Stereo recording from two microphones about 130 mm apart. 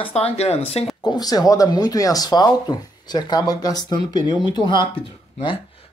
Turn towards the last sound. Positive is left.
turn(degrees=35)  # may be behind; listen again after turning